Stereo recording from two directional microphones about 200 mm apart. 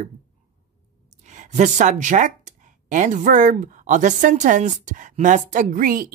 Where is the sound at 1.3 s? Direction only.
35° right (ahead or behind).